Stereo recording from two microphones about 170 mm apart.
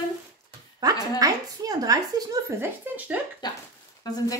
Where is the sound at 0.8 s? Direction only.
20° right (ahead or behind).